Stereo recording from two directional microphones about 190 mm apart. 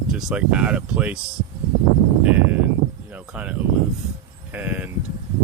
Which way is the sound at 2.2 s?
10° right (ahead or behind).